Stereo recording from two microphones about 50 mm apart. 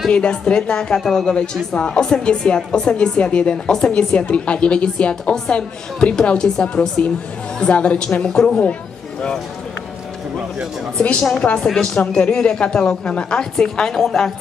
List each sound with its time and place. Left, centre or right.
0.1 s a woman's voice: centre
11.0 s a woman's voice: left
11.6 s a woman's voice: centre